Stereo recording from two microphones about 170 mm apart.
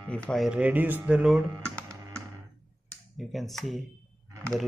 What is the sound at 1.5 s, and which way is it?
Computer keyboard, 15° right (ahead or behind).